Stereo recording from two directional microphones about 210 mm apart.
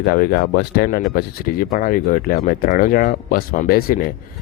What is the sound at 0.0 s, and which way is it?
Speech, 45° left (ahead or behind).